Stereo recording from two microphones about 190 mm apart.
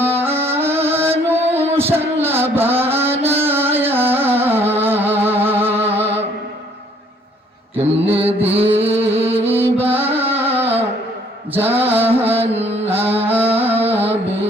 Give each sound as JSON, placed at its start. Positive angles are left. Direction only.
{"t": 0.0, "sound": "music", "side_deg": -10}
{"t": 7.8, "sound": "mantra", "side_deg": -10}
{"t": 8.9, "sound": "music", "side_deg": -10}
{"t": 9.1, "sound": "music", "side_deg": -35}
{"t": 9.5, "sound": "music", "side_deg": -10}
{"t": 10.0, "sound": "music", "side_deg": -30}
{"t": 10.2, "sound": "music", "side_deg": -10}
{"t": 11.5, "sound": "mantra", "side_deg": -10}
{"t": 12.4, "sound": "music", "side_deg": -35}
{"t": 12.9, "sound": "music", "side_deg": -10}